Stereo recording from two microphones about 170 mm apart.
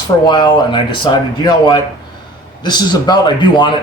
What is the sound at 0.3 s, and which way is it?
Speech, 25° left (ahead or behind).